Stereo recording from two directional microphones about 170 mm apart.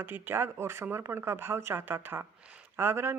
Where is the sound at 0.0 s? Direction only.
10° right (ahead or behind).